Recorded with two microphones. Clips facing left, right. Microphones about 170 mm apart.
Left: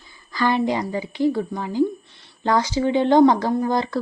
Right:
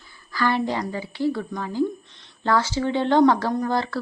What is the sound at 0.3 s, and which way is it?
A woman's voice, 20° left (ahead or behind).